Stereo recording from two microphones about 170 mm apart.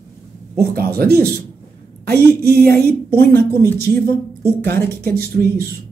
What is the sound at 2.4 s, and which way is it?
A woman's voice, 65° right (ahead or behind).